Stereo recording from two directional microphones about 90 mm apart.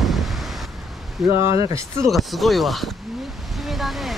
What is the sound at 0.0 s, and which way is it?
Vehicle, centre (ahead or behind).